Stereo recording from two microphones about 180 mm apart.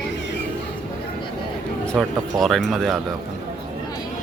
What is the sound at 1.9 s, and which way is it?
Speech, centre (ahead or behind).